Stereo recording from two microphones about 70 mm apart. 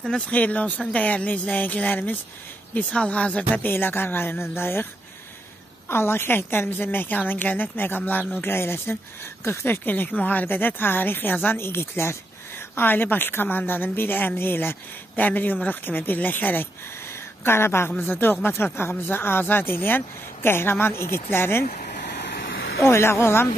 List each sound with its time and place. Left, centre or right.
0.3 s a woman's voice: left
3.5 s speech: left
5.9 s a woman's voice: left
22.8 s speech: left